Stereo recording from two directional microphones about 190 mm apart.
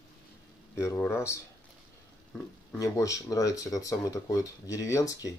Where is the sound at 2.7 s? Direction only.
15° left (ahead or behind).